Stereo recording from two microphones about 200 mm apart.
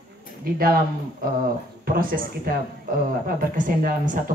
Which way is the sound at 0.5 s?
45° right (ahead or behind).